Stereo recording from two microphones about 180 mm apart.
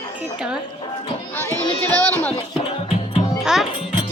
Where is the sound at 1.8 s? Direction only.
5° left (ahead or behind).